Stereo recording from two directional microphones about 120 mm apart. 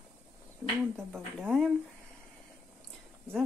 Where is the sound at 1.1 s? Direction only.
5° left (ahead or behind).